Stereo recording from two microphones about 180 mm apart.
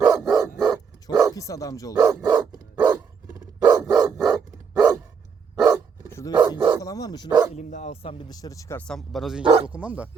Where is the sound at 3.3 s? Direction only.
20° right (ahead or behind).